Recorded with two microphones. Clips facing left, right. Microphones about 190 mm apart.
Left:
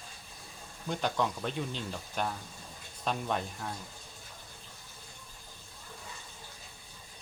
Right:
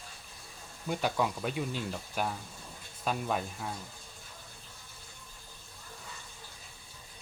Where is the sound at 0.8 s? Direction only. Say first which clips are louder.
Right 1 dB; 5° right (ahead or behind).